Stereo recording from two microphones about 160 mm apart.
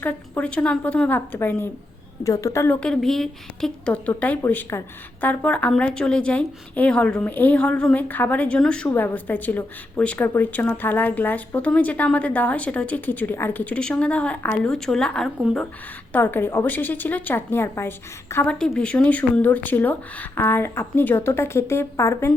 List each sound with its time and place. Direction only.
0.0 s a woman's voice: 10° left (ahead or behind)
2.8 s a woman's voice: 5° left (ahead or behind)